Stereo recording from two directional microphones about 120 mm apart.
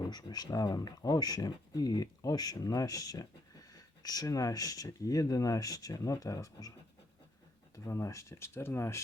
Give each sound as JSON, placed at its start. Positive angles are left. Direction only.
{"t": 0.0, "sound": "speech", "side_deg": 35}
{"t": 7.9, "sound": "speech", "side_deg": 25}